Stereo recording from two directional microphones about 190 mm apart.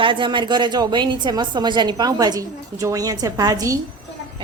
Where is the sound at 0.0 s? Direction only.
25° right (ahead or behind).